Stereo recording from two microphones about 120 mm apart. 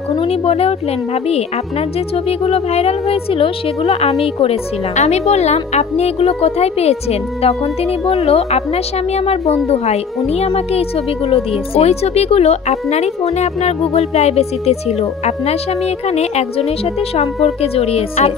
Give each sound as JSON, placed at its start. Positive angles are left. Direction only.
{"t": 0.3, "sound": "speech", "side_deg": 55}
{"t": 2.2, "sound": "speech", "side_deg": 55}